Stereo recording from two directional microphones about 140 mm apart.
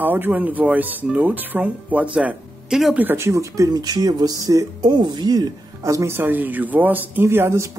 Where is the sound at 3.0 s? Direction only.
20° right (ahead or behind).